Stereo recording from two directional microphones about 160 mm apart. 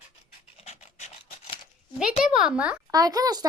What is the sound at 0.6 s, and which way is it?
Dog, 45° left (ahead or behind).